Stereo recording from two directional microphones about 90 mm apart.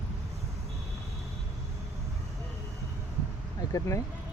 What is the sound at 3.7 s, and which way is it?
Speech, 35° left (ahead or behind).